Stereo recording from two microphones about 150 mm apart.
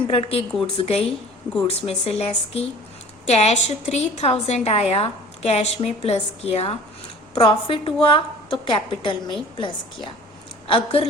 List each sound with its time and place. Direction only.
0.1 s a woman's voice: 40° left (ahead or behind)